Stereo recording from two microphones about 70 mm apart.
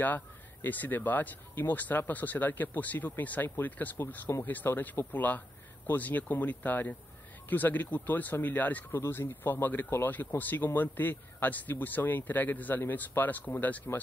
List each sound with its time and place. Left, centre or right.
0.0 s speech: left